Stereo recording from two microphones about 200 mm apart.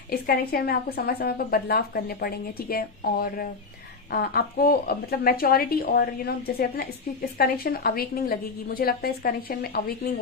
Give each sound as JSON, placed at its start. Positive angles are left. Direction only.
{"t": 0.1, "sound": "a woman's voice", "side_deg": 50}